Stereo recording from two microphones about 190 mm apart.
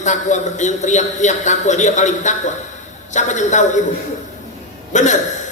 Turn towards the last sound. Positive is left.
turn(degrees=40)  # may be behind; listen again after turning